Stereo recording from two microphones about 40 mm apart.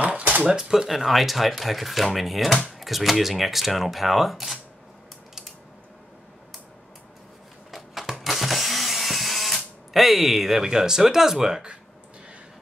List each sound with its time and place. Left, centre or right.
0.2 s cash register: right
0.6 s speech: centre
7.7 s a sound: centre